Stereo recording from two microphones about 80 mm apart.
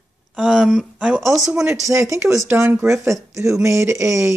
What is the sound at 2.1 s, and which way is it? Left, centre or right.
Speech, right.